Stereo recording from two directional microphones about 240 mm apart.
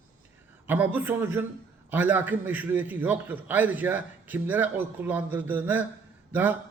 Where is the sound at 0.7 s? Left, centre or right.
Centre.